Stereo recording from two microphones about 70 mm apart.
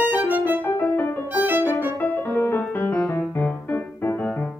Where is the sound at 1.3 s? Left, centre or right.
Right.